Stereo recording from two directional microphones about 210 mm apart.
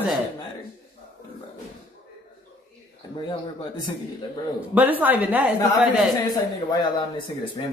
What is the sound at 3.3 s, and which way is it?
Speech, 20° left (ahead or behind).